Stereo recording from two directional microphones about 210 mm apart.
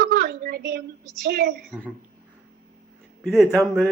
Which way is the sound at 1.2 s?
50° right (ahead or behind).